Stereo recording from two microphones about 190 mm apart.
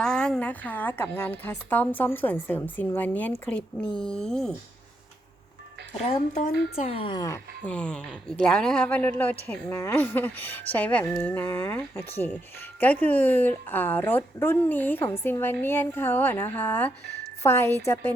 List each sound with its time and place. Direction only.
0.0 s a woman's voice: 5° left (ahead or behind)
6.0 s a woman's voice: 35° left (ahead or behind)
7.6 s speech: 5° left (ahead or behind)